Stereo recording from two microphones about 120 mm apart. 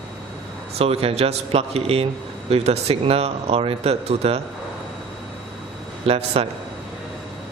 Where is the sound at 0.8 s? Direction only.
55° right (ahead or behind).